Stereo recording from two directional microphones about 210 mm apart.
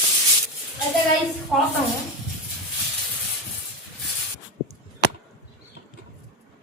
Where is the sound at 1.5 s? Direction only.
Centre (ahead or behind).